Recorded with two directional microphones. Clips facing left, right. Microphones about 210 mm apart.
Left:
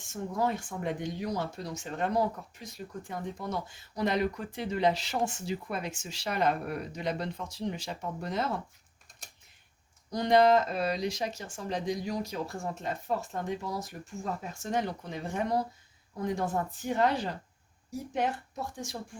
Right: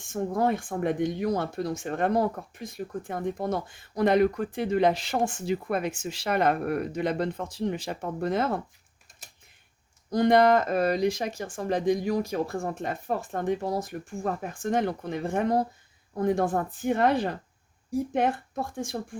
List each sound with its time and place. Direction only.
0.1 s speech: 50° right (ahead or behind)
10.1 s speech: 55° right (ahead or behind)